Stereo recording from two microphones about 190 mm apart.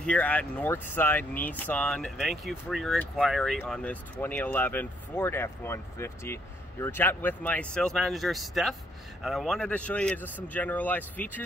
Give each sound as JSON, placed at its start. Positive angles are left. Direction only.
{"t": 0.0, "sound": "speech", "side_deg": 5}